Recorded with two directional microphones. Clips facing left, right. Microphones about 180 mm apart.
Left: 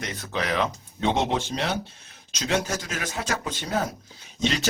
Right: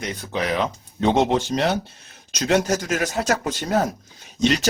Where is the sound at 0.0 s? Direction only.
15° right (ahead or behind).